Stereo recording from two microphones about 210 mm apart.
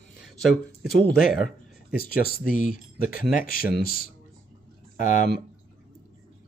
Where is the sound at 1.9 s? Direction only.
45° left (ahead or behind).